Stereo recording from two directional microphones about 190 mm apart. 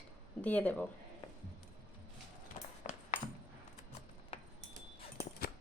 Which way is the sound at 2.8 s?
40° left (ahead or behind).